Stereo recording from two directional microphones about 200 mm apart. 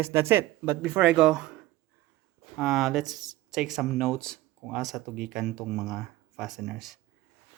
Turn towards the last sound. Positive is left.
turn(degrees=0)  # may be behind; listen again after turning